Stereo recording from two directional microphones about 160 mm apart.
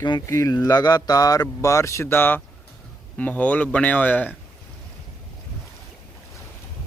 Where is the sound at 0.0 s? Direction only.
25° left (ahead or behind).